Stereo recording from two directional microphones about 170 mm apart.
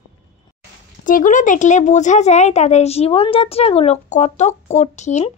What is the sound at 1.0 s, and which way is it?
A woman's voice, 50° left (ahead or behind).